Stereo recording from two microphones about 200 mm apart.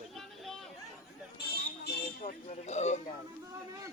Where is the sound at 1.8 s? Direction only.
50° left (ahead or behind).